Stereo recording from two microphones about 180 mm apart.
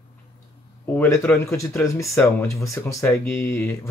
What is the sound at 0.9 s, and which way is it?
Speech, 10° left (ahead or behind).